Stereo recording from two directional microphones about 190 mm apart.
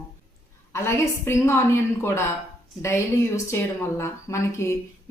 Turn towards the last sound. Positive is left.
turn(degrees=15)  # may be behind; listen again after turning